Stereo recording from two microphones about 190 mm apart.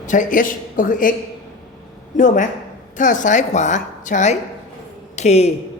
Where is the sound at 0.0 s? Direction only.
40° left (ahead or behind).